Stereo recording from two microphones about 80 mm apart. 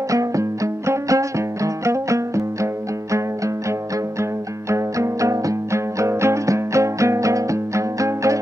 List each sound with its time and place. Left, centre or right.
0.1 s music: right
4.2 s music: right